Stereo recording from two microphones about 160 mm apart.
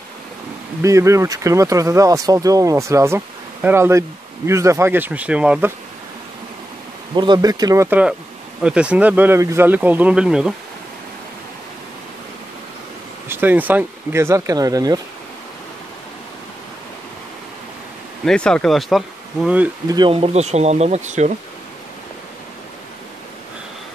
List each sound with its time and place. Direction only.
0.8 s speech: 20° right (ahead or behind)
7.2 s speech: 25° right (ahead or behind)
8.6 s speech: 5° right (ahead or behind)
13.3 s speech: 10° right (ahead or behind)
18.2 s speech: 5° left (ahead or behind)
19.9 s speech: 30° right (ahead or behind); by 21.3 s 45° right (ahead or behind)